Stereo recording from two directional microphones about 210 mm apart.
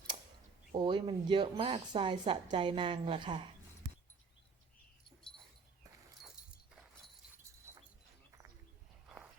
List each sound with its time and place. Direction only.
0.8 s a woman's voice: 20° right (ahead or behind)
7.7 s a sound: 15° right (ahead or behind)
9.0 s walk: 5° right (ahead or behind)